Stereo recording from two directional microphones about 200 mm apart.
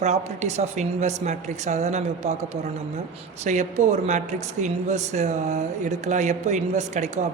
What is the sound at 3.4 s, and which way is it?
Speech, 35° right (ahead or behind).